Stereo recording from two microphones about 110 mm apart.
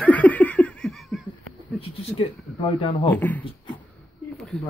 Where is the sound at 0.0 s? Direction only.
15° left (ahead or behind).